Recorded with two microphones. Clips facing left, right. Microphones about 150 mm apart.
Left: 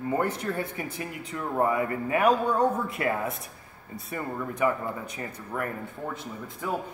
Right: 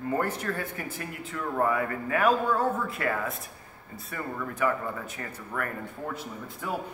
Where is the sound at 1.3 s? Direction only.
20° left (ahead or behind).